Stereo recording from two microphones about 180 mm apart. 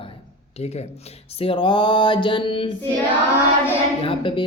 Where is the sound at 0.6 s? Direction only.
35° left (ahead or behind).